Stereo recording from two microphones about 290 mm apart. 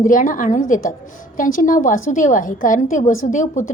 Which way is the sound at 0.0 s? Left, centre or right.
Left.